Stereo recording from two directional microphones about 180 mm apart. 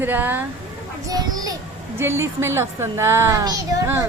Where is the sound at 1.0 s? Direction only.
20° right (ahead or behind).